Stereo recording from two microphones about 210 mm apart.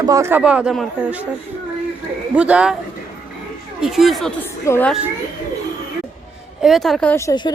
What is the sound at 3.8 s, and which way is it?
A woman's voice, centre (ahead or behind).